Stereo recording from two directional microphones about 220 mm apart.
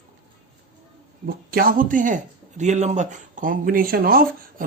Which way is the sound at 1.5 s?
40° right (ahead or behind).